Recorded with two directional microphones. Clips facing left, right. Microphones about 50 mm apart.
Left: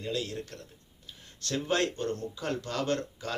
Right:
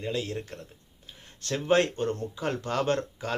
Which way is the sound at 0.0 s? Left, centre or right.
Right.